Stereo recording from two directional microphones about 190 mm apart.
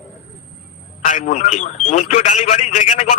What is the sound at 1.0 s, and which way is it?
Speech, 40° left (ahead or behind).